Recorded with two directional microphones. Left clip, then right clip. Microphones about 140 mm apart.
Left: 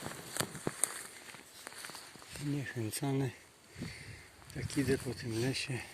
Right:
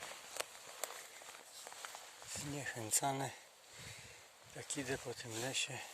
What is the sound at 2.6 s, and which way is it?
Speech, 45° right (ahead or behind).